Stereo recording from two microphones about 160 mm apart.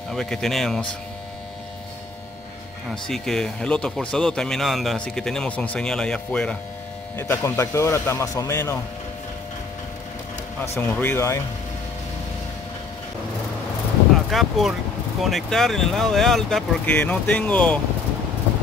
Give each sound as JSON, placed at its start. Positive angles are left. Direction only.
{"t": 0.1, "sound": "speech", "side_deg": 5}
{"t": 2.9, "sound": "speech", "side_deg": 5}
{"t": 10.8, "sound": "speech", "side_deg": 10}
{"t": 14.3, "sound": "speech", "side_deg": 0}